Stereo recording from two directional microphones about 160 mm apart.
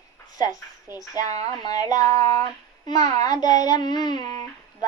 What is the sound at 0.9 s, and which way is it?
A child's voice, 20° left (ahead or behind).